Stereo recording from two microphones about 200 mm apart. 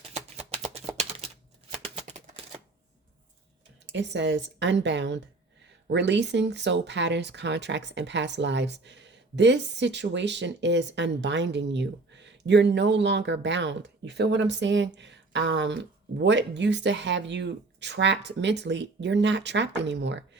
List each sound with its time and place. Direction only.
0.0 s a sound: 35° right (ahead or behind)
1.8 s typewriter: 35° right (ahead or behind)
3.9 s speech: 65° right (ahead or behind)